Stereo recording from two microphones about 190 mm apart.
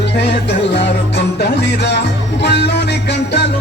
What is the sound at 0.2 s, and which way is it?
Music, 65° left (ahead or behind).